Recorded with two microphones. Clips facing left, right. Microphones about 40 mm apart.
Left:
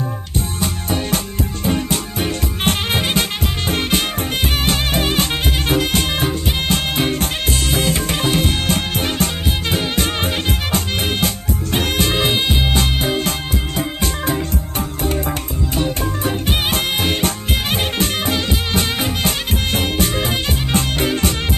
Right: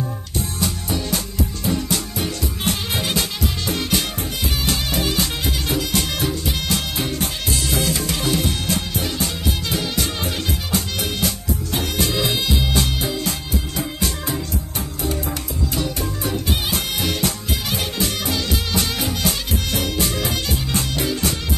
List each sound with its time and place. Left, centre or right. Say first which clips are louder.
0.6 s music: left 3 dB; left
15.7 s music: left 6 dB; left